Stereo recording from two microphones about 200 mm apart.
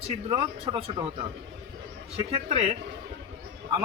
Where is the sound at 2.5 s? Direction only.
30° right (ahead or behind).